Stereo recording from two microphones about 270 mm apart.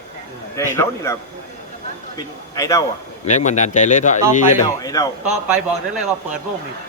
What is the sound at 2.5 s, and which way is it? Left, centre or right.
Speech, centre.